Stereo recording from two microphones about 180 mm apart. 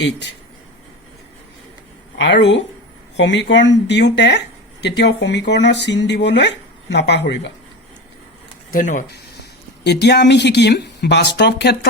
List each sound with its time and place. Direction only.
2.1 s speech: 75° left (ahead or behind)
8.7 s speech: 45° left (ahead or behind)
9.4 s speech: 65° left (ahead or behind)